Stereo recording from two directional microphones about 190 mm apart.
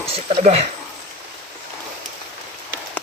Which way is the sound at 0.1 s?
35° right (ahead or behind).